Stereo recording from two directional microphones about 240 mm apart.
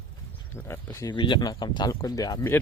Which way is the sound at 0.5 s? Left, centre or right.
Centre.